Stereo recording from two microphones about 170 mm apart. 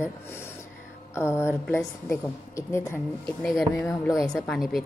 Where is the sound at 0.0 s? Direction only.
15° left (ahead or behind).